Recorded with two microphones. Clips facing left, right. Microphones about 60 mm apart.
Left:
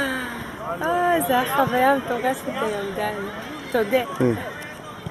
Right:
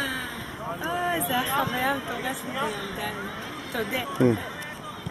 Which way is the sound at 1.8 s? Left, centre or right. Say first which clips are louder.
Left 8 dB; centre.